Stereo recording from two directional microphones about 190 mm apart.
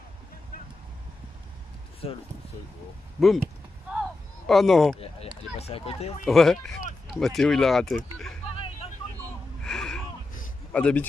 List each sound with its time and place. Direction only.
2.0 s speech: 30° left (ahead or behind)
3.2 s speech: centre (ahead or behind)
4.5 s speech: centre (ahead or behind)
5.0 s speech: 30° left (ahead or behind)
6.2 s speech: centre (ahead or behind)
9.2 s gasp: 5° left (ahead or behind)
10.7 s a man's voice: 5° left (ahead or behind)